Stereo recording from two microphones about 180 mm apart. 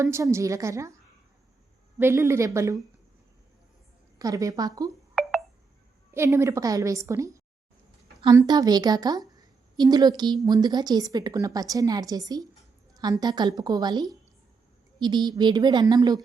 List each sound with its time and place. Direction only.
0.0 s a woman's voice: 15° right (ahead or behind)
2.0 s a woman's voice: 15° right (ahead or behind)
4.2 s a woman's voice: 20° right (ahead or behind)
6.1 s a woman's voice: 15° right (ahead or behind)